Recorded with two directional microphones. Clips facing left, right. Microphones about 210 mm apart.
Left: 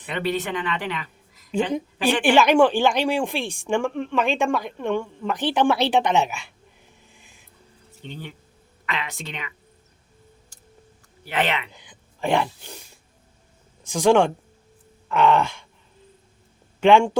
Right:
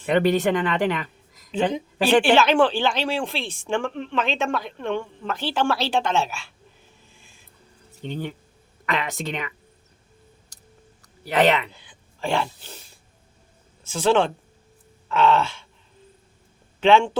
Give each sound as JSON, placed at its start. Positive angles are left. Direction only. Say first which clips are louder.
{"t": 0.1, "sound": "speech", "louder": "right 7 dB", "side_deg": -45}
{"t": 2.2, "sound": "a woman's voice", "louder": "left 1 dB", "side_deg": 15}
{"t": 7.1, "sound": "music", "louder": "left 1 dB", "side_deg": 15}
{"t": 8.0, "sound": "a woman's voice", "louder": "right 7 dB", "side_deg": -50}
{"t": 11.3, "sound": "speech", "louder": "right 6 dB", "side_deg": -40}
{"t": 11.7, "sound": "speech", "louder": "left 2 dB", "side_deg": 15}
{"t": 13.8, "sound": "a woman's voice", "louder": "left 3 dB", "side_deg": 15}
{"t": 16.8, "sound": "a woman's voice", "louder": "left 1 dB", "side_deg": 10}